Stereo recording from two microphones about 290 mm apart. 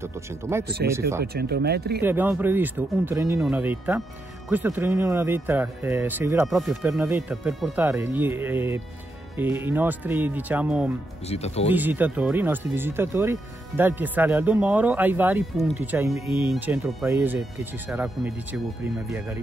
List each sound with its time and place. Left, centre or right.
0.0 s speech: centre
1.2 s speech: right
2.0 s speech: centre
11.2 s speech: left
11.7 s speech: centre